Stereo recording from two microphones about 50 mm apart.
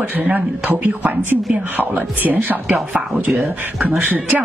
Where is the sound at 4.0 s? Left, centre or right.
Right.